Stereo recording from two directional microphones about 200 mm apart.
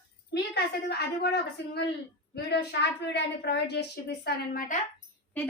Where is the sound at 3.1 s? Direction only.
55° left (ahead or behind).